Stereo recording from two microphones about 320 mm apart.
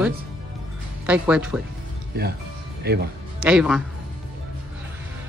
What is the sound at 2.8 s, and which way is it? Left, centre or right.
Speech, right.